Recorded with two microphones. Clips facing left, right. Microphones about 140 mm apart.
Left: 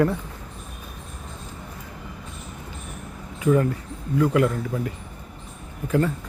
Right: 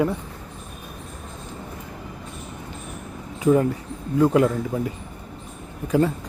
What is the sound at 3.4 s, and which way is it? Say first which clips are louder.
A man's voice: right 2 dB; 20° right (ahead or behind).